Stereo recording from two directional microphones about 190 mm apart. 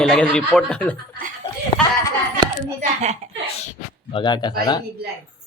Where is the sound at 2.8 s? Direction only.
35° right (ahead or behind).